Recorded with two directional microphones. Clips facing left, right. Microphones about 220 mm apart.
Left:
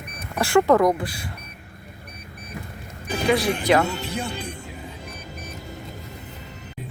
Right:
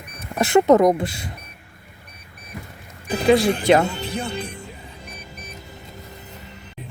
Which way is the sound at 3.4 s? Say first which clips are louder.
Right 3 dB; 25° right (ahead or behind).